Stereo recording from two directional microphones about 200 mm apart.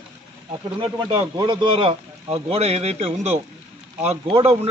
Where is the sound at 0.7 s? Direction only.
25° right (ahead or behind).